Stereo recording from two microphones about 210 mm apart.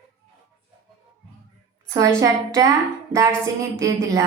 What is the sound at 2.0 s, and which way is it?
Speech, 15° right (ahead or behind).